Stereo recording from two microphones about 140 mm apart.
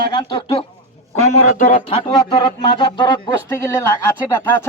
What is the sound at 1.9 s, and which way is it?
Speech, 35° left (ahead or behind).